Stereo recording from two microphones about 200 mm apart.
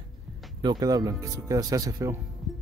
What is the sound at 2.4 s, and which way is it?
Music, centre (ahead or behind).